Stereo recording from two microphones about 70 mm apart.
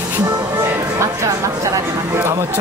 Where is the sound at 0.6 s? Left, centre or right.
Right.